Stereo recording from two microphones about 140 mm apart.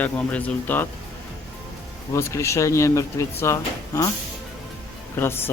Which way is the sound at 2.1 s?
20° left (ahead or behind).